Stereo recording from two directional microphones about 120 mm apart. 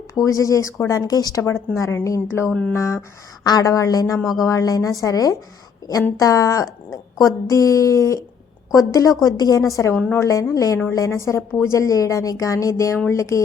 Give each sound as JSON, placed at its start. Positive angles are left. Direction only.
{"t": 0.3, "sound": "speech", "side_deg": 30}
{"t": 2.5, "sound": "speech", "side_deg": 5}
{"t": 2.7, "sound": "speech", "side_deg": 25}
{"t": 4.2, "sound": "speech", "side_deg": 0}
{"t": 4.4, "sound": "speech", "side_deg": 30}